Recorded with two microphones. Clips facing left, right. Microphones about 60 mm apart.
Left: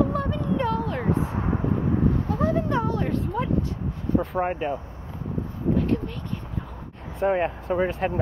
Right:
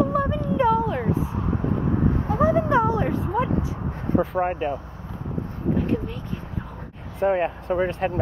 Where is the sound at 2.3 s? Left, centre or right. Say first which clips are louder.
Right 8 dB; centre.